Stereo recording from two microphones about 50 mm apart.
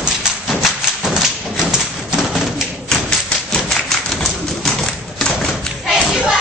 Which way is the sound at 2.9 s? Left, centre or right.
Centre.